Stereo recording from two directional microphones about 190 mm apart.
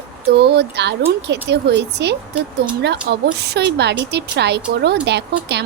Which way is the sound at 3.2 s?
60° right (ahead or behind).